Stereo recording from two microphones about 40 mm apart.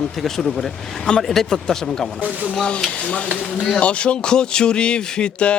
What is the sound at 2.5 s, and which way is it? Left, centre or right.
Speech, left.